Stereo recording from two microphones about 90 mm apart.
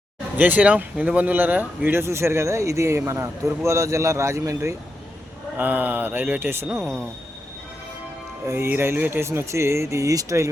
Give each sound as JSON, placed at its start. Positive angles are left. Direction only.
{"t": 0.3, "sound": "speech", "side_deg": -20}
{"t": 5.5, "sound": "speech", "side_deg": -20}
{"t": 6.8, "sound": "speech", "side_deg": 5}
{"t": 8.4, "sound": "speech", "side_deg": -25}